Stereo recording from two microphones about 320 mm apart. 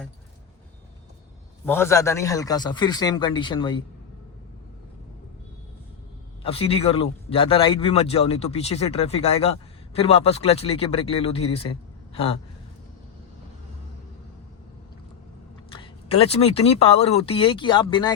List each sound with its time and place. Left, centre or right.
1.6 s a man's voice: centre
6.4 s a man's voice: centre
12.1 s a sound: centre
15.7 s a man's voice: centre